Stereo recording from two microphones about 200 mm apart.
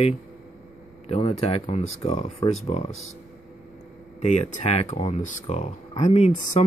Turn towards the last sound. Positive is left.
turn(degrees=35)  # may be behind; listen again after turning